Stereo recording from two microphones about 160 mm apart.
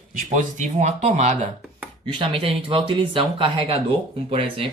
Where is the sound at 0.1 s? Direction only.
50° right (ahead or behind).